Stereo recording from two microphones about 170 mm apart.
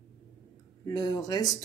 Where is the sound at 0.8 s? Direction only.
20° left (ahead or behind).